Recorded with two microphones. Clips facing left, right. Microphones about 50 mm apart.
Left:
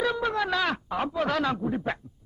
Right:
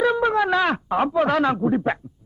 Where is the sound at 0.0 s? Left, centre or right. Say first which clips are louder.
Right 7 dB; right.